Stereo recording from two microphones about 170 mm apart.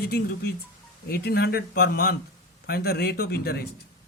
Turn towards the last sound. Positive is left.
turn(degrees=70)  # may be behind; listen again after turning